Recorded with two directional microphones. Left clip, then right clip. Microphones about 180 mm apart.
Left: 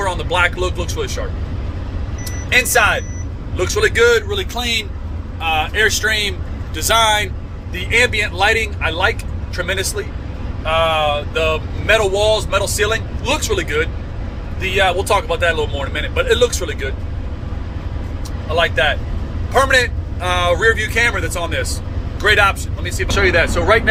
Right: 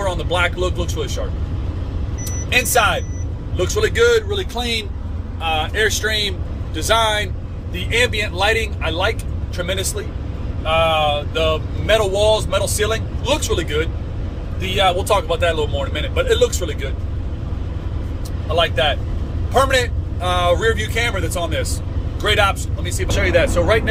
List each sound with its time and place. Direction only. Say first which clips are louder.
0.0 s a man's voice: left 3 dB; 15° right (ahead or behind)
2.5 s a man's voice: left 2 dB; 20° right (ahead or behind)
4.3 s speech: left 2 dB; 30° right (ahead or behind)
7.8 s a man's voice: left 3 dB; 15° right (ahead or behind)
10.7 s a man's voice: left 1 dB; 25° right (ahead or behind)
14.8 s a man's voice: left 1 dB; 15° right (ahead or behind)
18.5 s a man's voice: left 2 dB; 15° right (ahead or behind)